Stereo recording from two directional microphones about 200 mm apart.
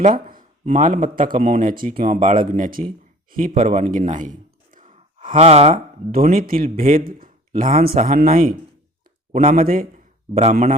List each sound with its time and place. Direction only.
0.0 s speech: 45° right (ahead or behind)
3.3 s a sound: 45° right (ahead or behind)
5.3 s speech: 30° right (ahead or behind)
6.2 s speech: 45° right (ahead or behind)